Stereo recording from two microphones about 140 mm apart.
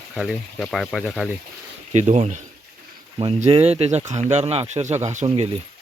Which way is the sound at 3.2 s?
40° right (ahead or behind).